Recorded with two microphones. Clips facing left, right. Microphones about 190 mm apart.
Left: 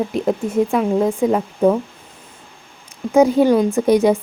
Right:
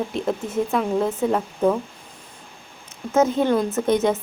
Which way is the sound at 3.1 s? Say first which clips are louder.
Left 6 dB; 10° left (ahead or behind).